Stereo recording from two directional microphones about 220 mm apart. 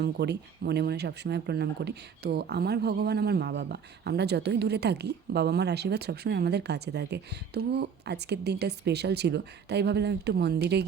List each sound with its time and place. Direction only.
0.0 s speech: 50° right (ahead or behind)